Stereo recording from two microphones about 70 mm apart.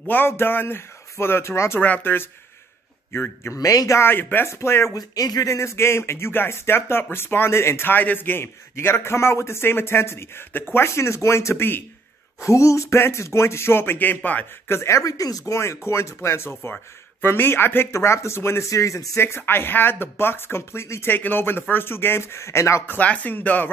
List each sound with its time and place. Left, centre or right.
0.3 s speech: left
1.8 s speech: left
3.5 s speech: left
4.0 s speech: left
4.5 s speech: left
4.9 s speech: left
12.4 s speech: left
14.7 s speech: left
17.9 s speech: left
21.1 s speech: left
22.8 s speech: left